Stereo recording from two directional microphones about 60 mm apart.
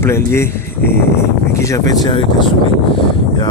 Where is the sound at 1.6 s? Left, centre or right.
Left.